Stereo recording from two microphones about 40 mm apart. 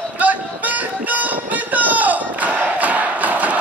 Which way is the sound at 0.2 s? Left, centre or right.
Right.